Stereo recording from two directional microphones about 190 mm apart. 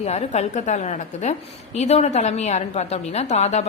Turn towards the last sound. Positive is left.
turn(degrees=35)  # may be behind; listen again after turning